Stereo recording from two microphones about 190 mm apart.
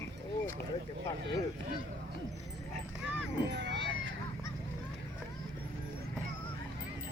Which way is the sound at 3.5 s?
70° right (ahead or behind).